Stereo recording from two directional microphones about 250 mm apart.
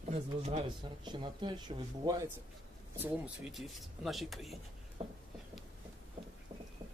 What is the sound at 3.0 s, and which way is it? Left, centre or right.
Speech, centre.